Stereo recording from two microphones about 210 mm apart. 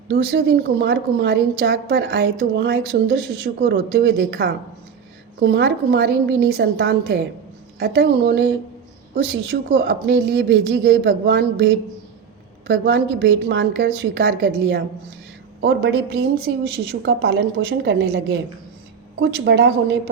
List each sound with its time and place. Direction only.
0.1 s a woman's voice: 50° right (ahead or behind)